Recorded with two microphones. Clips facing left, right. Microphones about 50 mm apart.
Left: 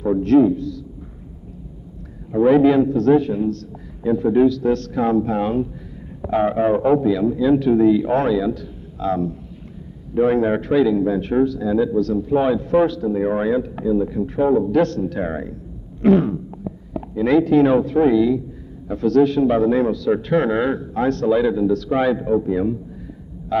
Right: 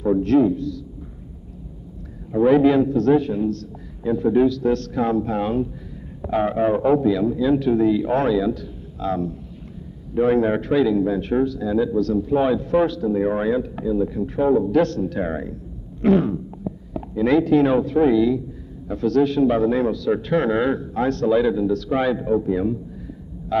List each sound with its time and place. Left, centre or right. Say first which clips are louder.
0.0 s a man's voice: left 2 dB; left
2.3 s speech: left 2 dB; left
5.0 s speech: left 4 dB; left
6.2 s speech: left 2 dB; left
9.0 s a man's voice: left 3 dB; left
12.0 s speech: left 1 dB; left
16.0 s a sound: left 2 dB; left
17.1 s a man's voice: left 2 dB; left
17.5 s speech: left 2 dB; left
22.2 s a man's voice: left 1 dB; left